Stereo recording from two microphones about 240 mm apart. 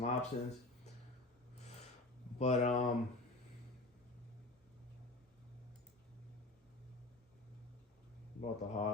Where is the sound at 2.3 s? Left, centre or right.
Left.